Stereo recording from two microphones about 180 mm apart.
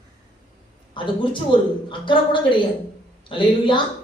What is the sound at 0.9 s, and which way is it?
Speech, 25° left (ahead or behind).